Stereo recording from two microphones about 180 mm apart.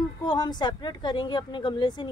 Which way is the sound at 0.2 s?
25° left (ahead or behind).